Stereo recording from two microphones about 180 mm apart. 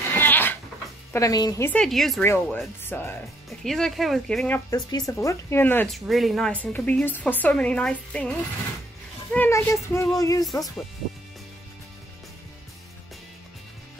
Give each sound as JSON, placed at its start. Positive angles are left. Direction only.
{"t": 0.1, "sound": "cat", "side_deg": 10}
{"t": 1.1, "sound": "speech", "side_deg": 20}
{"t": 1.7, "sound": "speech", "side_deg": 5}
{"t": 2.2, "sound": "speech", "side_deg": 15}
{"t": 3.6, "sound": "speech", "side_deg": 0}
{"t": 4.6, "sound": "speech", "side_deg": 20}
{"t": 6.0, "sound": "speech", "side_deg": 0}